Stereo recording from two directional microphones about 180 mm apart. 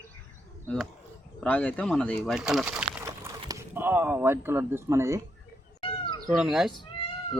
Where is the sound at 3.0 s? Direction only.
15° right (ahead or behind).